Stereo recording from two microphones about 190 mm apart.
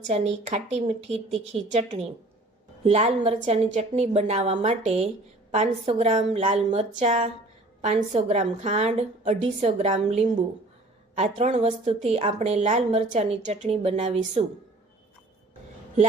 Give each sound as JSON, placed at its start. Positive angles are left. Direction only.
{"t": 0.1, "sound": "speech", "side_deg": -35}